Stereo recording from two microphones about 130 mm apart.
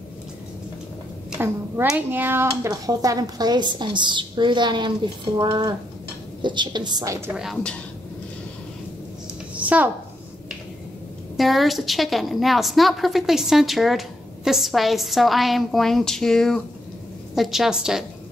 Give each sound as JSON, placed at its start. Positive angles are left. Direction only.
{"t": 1.9, "sound": "speech", "side_deg": -15}
{"t": 9.6, "sound": "a sound", "side_deg": -10}
{"t": 11.3, "sound": "a woman's voice", "side_deg": 0}